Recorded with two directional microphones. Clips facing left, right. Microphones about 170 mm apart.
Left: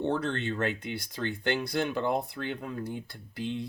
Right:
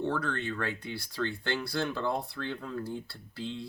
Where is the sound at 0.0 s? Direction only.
25° left (ahead or behind).